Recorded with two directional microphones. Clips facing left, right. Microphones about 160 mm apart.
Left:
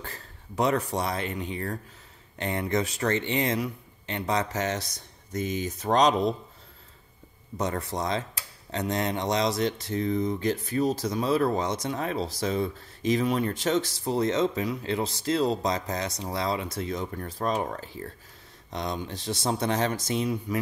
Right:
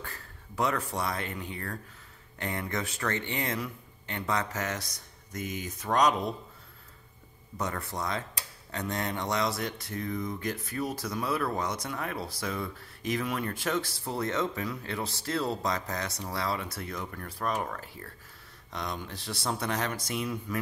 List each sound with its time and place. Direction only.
0.0 s speech: 25° left (ahead or behind)
7.5 s speech: 20° left (ahead or behind)